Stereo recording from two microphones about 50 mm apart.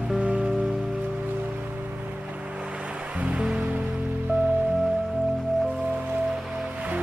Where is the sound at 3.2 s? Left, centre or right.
Right.